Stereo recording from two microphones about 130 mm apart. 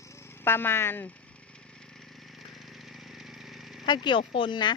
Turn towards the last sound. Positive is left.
turn(degrees=35)  # may be behind; listen again after turning